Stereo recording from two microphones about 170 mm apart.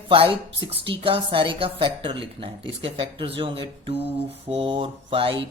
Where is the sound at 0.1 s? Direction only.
30° right (ahead or behind).